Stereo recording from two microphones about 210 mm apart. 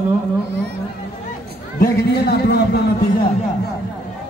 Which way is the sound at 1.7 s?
50° left (ahead or behind).